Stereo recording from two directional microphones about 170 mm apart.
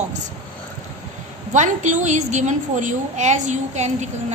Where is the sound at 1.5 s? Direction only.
45° right (ahead or behind).